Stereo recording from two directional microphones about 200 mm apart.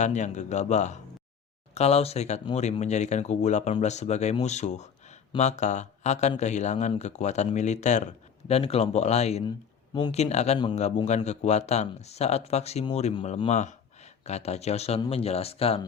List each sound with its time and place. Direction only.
0.0 s speech: 35° left (ahead or behind)